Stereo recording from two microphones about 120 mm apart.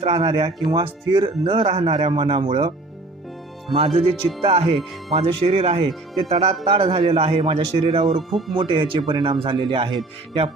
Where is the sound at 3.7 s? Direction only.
50° right (ahead or behind).